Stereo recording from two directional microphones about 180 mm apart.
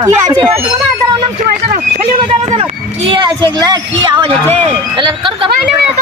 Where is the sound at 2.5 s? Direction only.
35° right (ahead or behind).